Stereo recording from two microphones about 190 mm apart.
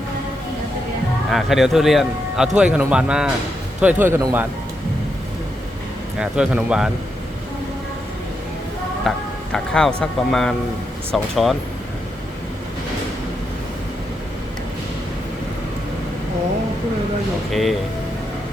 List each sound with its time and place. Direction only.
1.3 s speech: centre (ahead or behind); by 4.4 s 15° right (ahead or behind)
6.1 s speech: 5° right (ahead or behind)
9.0 s speech: 5° left (ahead or behind)
17.5 s speech: centre (ahead or behind)